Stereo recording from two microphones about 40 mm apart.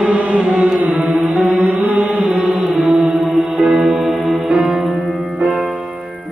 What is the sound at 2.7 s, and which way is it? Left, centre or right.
Music, centre.